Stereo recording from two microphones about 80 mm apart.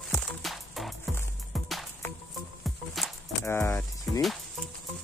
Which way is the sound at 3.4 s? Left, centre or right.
Left.